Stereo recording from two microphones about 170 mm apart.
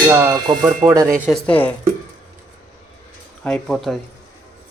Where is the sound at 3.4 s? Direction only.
5° left (ahead or behind).